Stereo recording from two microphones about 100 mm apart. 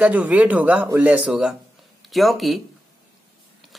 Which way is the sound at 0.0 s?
15° right (ahead or behind).